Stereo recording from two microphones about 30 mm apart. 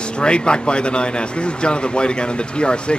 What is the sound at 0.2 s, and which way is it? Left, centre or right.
Speech, left.